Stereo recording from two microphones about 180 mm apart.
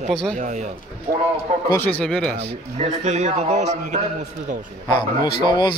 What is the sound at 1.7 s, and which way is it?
Speech, 10° left (ahead or behind).